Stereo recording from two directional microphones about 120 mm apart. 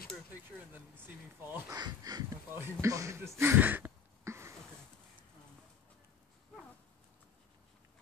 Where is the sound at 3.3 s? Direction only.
15° right (ahead or behind).